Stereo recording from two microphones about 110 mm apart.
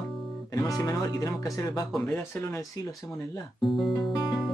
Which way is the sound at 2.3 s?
25° left (ahead or behind).